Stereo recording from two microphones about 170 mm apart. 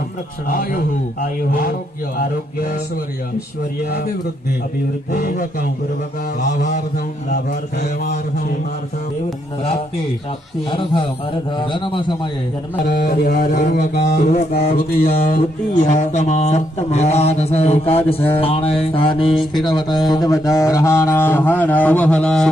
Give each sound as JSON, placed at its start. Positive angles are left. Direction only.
{"t": 0.4, "sound": "speech", "side_deg": 55}
{"t": 3.8, "sound": "a man's voice", "side_deg": 70}
{"t": 5.1, "sound": "speech", "side_deg": 60}
{"t": 6.4, "sound": "speech", "side_deg": 45}
{"t": 10.7, "sound": "a man's voice", "side_deg": 30}
{"t": 12.9, "sound": "speech", "side_deg": 60}
{"t": 13.3, "sound": "speech", "side_deg": 45}
{"t": 14.5, "sound": "speech", "side_deg": 65}
{"t": 15.8, "sound": "mantra", "side_deg": 45}
{"t": 19.6, "sound": "a sound", "side_deg": 25}